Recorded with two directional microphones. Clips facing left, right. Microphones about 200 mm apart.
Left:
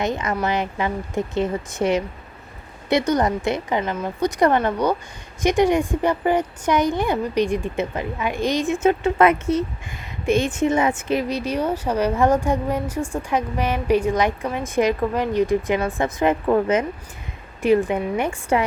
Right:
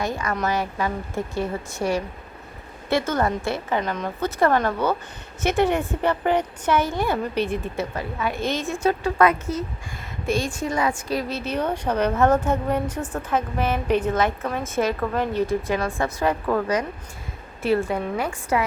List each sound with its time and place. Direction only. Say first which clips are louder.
0.0 s a woman's voice: left 2 dB; 20° left (ahead or behind)
3.8 s a woman's voice: left 3 dB; 5° left (ahead or behind); by 18.6 s 25° left (ahead or behind)